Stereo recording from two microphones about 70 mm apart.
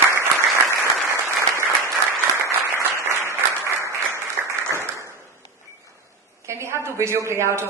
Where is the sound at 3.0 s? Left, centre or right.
Right.